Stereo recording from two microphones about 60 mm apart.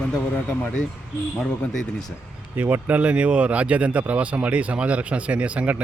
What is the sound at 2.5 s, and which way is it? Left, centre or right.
Speech, right.